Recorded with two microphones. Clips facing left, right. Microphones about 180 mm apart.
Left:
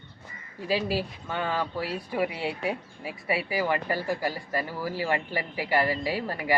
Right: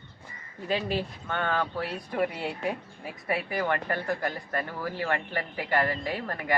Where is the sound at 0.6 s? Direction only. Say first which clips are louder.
Left 1 dB; 5° left (ahead or behind).